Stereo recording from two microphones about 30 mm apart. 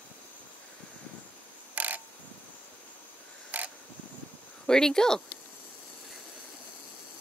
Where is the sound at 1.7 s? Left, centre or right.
Right.